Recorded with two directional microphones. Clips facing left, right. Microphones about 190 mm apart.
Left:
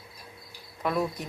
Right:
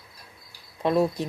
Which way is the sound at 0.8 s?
30° right (ahead or behind).